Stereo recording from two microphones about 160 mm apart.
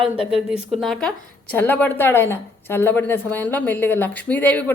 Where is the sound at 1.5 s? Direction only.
15° left (ahead or behind).